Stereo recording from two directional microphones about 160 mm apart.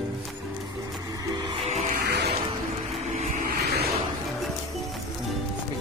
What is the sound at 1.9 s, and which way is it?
Music, 90° right.